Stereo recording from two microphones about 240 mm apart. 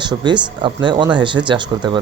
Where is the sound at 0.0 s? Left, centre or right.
Centre.